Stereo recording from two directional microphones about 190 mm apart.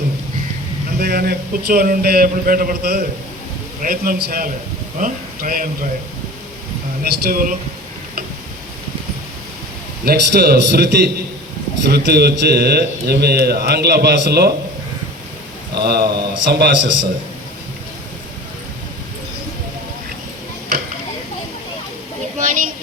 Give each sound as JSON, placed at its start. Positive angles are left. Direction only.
{"t": 0.9, "sound": "a man's voice", "side_deg": -55}
{"t": 7.0, "sound": "a man's voice", "side_deg": -50}
{"t": 10.1, "sound": "a man's voice", "side_deg": -55}
{"t": 15.7, "sound": "a man's voice", "side_deg": -55}
{"t": 22.4, "sound": "a sound", "side_deg": -45}